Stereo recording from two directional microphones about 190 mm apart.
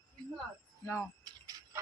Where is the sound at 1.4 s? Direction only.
20° right (ahead or behind).